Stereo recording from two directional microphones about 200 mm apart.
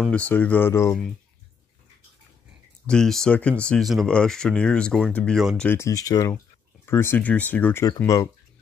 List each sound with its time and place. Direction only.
0.0 s speech: 5° left (ahead or behind)
2.9 s speech: 5° left (ahead or behind)
5.7 s speech: 15° left (ahead or behind)